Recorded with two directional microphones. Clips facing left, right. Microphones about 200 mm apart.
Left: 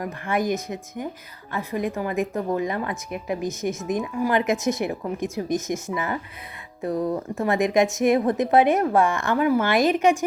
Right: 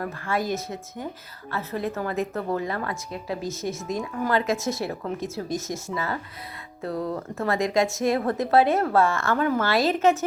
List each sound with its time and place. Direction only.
0.0 s a woman's voice: 15° left (ahead or behind)